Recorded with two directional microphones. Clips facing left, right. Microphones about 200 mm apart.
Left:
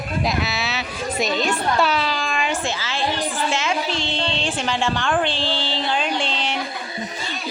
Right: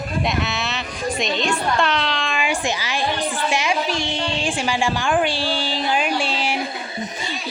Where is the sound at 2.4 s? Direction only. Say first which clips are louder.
Right 1 dB; 15° right (ahead or behind).